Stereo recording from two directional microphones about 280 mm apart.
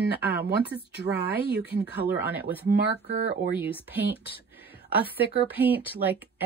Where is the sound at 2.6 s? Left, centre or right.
Right.